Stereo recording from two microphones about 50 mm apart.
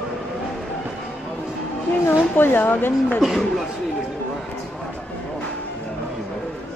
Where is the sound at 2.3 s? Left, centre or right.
Left.